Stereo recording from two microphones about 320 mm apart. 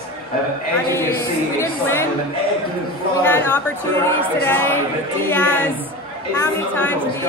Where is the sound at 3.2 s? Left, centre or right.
Centre.